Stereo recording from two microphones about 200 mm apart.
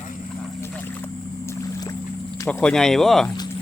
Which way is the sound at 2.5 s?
5° left (ahead or behind).